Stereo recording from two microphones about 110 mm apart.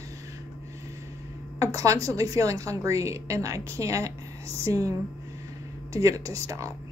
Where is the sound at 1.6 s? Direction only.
30° right (ahead or behind).